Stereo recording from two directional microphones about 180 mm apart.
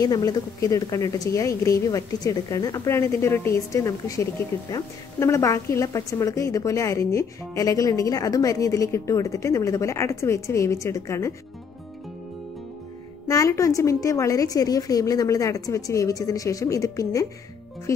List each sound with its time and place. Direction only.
0.0 s a woman's voice: 20° left (ahead or behind)
13.3 s a woman's voice: 15° left (ahead or behind)